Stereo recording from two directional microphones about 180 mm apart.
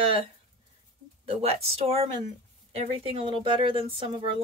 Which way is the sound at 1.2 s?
30° right (ahead or behind).